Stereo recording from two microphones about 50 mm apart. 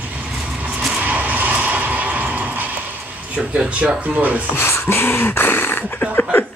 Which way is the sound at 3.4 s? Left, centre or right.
Centre.